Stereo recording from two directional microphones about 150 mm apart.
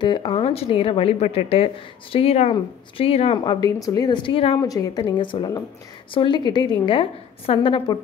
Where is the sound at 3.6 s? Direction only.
25° left (ahead or behind).